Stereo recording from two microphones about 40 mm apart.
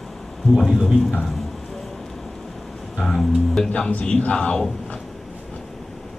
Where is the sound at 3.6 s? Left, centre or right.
Left.